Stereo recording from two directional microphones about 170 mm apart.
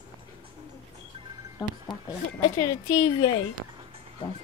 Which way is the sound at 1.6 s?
20° left (ahead or behind).